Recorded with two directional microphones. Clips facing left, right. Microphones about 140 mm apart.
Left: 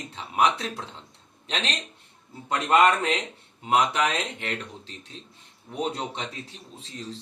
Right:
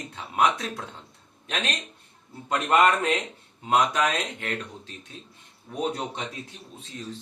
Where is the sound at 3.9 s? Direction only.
25° left (ahead or behind).